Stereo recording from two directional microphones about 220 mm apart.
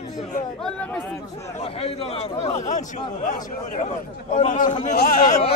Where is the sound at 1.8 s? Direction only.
25° left (ahead or behind).